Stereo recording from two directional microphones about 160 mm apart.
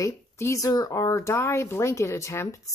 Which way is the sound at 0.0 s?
20° left (ahead or behind).